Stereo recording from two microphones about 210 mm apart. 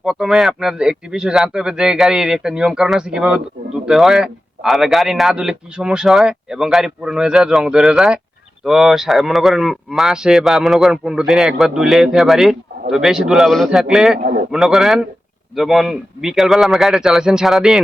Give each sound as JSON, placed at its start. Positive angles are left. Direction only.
{"t": 0.0, "sound": "a man's voice", "side_deg": 0}
{"t": 14.2, "sound": "a man's voice", "side_deg": -45}
{"t": 14.5, "sound": "a man's voice", "side_deg": 0}